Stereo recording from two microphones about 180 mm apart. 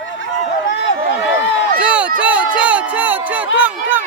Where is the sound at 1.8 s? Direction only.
5° right (ahead or behind).